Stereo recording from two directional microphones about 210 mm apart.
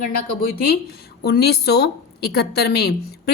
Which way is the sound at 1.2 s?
50° left (ahead or behind).